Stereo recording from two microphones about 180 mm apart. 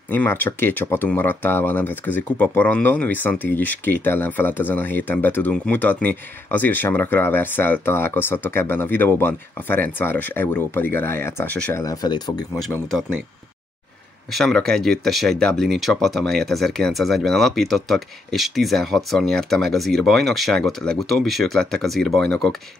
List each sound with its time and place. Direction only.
0.1 s speech: 10° left (ahead or behind)
12.7 s speech: 5° left (ahead or behind)
14.3 s speech: centre (ahead or behind)